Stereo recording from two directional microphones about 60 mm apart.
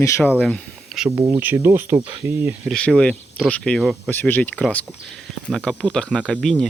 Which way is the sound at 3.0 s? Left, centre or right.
Centre.